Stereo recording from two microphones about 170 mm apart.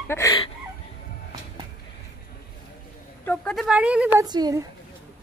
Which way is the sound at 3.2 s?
10° left (ahead or behind).